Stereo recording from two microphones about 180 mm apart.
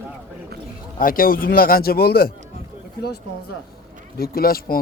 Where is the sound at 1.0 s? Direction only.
50° left (ahead or behind).